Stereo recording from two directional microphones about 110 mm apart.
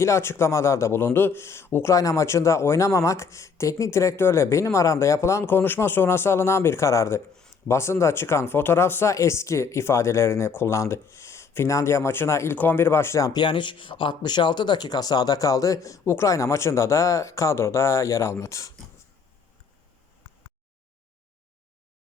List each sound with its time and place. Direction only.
0.0 s a man's voice: 25° left (ahead or behind)
13.4 s a man's voice: 45° left (ahead or behind); by 18.7 s 25° left (ahead or behind)